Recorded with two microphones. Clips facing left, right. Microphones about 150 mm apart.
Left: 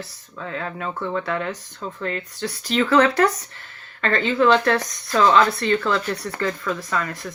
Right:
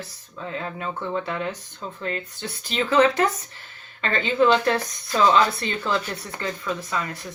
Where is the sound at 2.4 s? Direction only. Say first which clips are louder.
Left 8 dB; 90° left.